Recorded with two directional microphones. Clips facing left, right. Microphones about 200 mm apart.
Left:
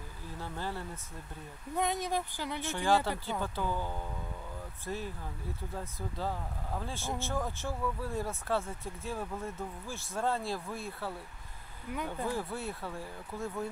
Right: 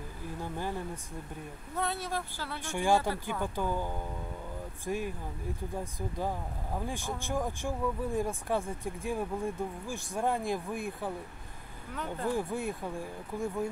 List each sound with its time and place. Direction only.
0.4 s speech: 15° right (ahead or behind)
1.8 s speech: 15° left (ahead or behind)
2.6 s speech: 15° right (ahead or behind)
11.9 s speech: 10° left (ahead or behind)
12.3 s speech: 15° right (ahead or behind)